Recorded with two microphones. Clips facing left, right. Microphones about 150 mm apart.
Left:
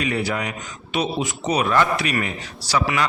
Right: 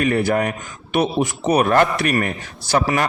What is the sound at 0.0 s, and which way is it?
A man's voice, 50° right (ahead or behind).